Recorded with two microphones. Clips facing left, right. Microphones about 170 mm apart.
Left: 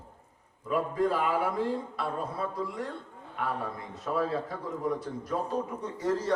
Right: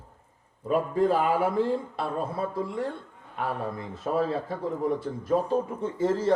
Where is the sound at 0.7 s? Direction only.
25° right (ahead or behind).